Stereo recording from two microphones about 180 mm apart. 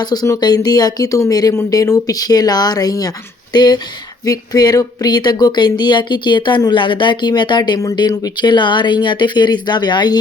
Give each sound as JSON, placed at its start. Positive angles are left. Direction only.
{"t": 0.0, "sound": "speech", "side_deg": 20}